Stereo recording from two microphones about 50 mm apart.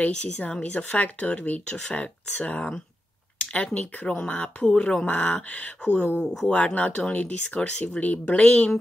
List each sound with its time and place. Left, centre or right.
0.1 s speech: centre
6.1 s speech: centre